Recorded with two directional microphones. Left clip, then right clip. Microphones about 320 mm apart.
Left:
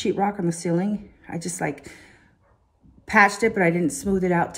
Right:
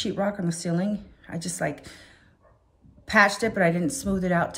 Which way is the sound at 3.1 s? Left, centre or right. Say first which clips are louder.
Left 3 dB; centre.